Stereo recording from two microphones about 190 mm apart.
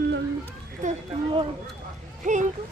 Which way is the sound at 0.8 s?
40° right (ahead or behind).